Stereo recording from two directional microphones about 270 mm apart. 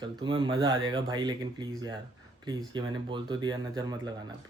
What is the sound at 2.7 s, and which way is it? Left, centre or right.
Speech, centre.